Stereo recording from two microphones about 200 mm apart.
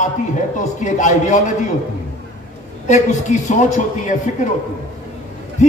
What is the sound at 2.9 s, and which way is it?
A man's voice, 35° left (ahead or behind).